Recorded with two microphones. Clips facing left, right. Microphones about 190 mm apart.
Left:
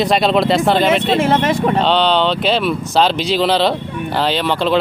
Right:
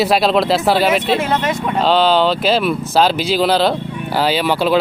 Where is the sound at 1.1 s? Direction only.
30° left (ahead or behind).